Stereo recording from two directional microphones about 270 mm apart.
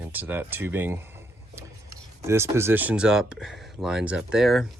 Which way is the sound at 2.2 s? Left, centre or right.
Centre.